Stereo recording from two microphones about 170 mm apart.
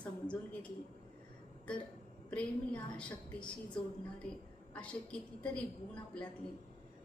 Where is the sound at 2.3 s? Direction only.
5° left (ahead or behind).